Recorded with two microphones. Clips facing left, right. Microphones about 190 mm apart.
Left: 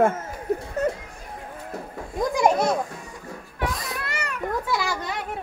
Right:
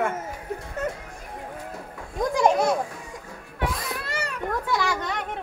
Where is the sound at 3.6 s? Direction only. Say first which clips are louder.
Even; centre (ahead or behind).